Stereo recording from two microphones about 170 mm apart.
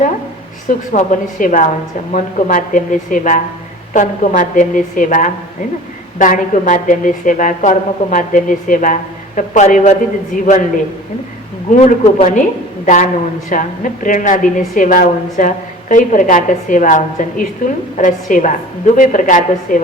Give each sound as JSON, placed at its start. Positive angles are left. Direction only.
{"t": 0.7, "sound": "a woman's voice", "side_deg": 50}
{"t": 11.8, "sound": "a woman's voice", "side_deg": 50}